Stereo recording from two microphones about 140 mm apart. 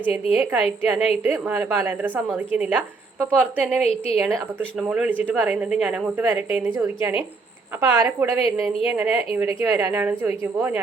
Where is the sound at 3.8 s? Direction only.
45° left (ahead or behind).